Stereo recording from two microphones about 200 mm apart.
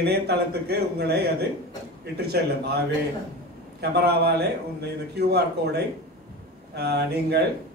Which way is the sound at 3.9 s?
55° right (ahead or behind).